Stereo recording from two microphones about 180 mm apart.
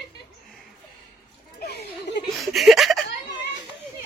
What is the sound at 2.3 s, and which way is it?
Speech, centre (ahead or behind).